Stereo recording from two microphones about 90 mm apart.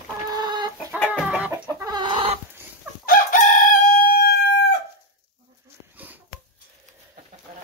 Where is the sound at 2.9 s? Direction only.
20° right (ahead or behind).